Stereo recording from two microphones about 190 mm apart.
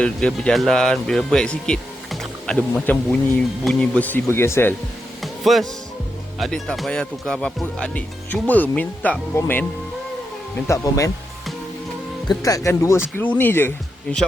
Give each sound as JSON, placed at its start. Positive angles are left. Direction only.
{"t": 0.0, "sound": "speech", "side_deg": 5}
{"t": 5.2, "sound": "music", "side_deg": 0}
{"t": 6.4, "sound": "speech", "side_deg": 0}
{"t": 10.7, "sound": "speech", "side_deg": 15}
{"t": 12.3, "sound": "speech", "side_deg": 20}